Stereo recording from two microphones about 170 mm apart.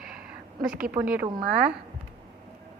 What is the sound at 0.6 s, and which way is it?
Speech, 5° right (ahead or behind).